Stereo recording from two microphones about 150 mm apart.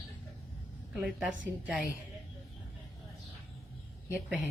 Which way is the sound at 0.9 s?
5° right (ahead or behind).